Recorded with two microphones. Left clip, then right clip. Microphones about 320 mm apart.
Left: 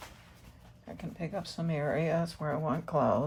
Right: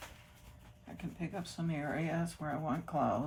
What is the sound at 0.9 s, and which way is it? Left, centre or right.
Speech, left.